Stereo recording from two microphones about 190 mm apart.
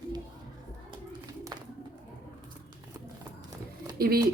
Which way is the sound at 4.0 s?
55° right (ahead or behind).